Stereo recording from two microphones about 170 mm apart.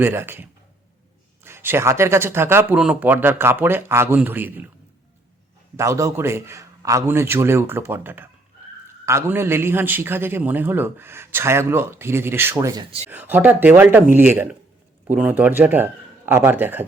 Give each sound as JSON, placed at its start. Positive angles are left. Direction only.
{"t": 0.0, "sound": "a man's voice", "side_deg": -15}
{"t": 1.5, "sound": "a man's voice", "side_deg": -15}
{"t": 5.7, "sound": "a man's voice", "side_deg": -15}